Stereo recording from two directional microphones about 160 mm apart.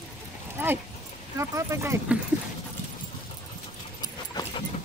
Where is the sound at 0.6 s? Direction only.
15° right (ahead or behind).